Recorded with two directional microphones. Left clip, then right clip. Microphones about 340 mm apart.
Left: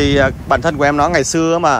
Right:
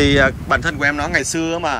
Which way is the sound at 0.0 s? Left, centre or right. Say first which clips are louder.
Left 1 dB; centre.